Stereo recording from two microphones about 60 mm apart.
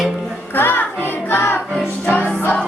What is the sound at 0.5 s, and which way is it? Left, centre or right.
Music, left.